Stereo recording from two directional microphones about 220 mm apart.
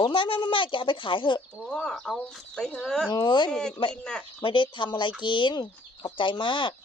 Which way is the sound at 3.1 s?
20° left (ahead or behind).